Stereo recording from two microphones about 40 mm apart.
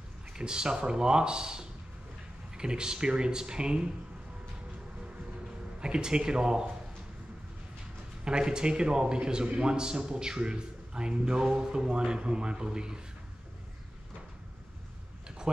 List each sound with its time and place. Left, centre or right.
0.3 s a man's voice: centre
5.8 s a man's voice: right
8.2 s a man's voice: right
15.2 s tick-tock: right